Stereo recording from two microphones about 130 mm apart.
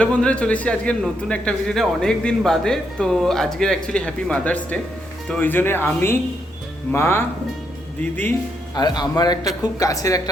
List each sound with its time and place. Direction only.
0.0 s a man's voice: 10° left (ahead or behind)
8.7 s a man's voice: 35° left (ahead or behind)